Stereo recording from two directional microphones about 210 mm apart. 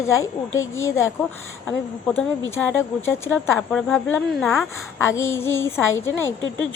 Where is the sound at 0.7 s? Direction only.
15° left (ahead or behind).